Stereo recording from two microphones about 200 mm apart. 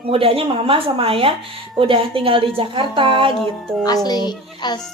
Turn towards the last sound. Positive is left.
turn(degrees=20)  # may be behind; listen again after turning